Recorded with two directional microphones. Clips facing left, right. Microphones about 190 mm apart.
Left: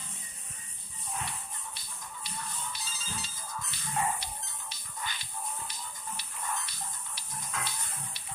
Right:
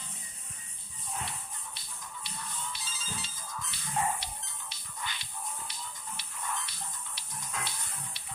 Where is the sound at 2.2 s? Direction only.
40° left (ahead or behind).